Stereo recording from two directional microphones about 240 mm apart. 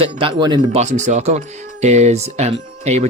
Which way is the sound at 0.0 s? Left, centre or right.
Right.